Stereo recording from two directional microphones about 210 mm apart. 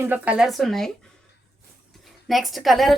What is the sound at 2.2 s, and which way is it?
Speech, centre (ahead or behind).